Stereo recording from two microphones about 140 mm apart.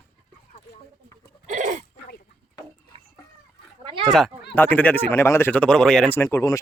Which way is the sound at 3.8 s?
40° right (ahead or behind).